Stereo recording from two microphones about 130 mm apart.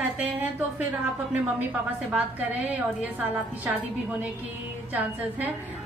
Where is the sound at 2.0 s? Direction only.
10° right (ahead or behind).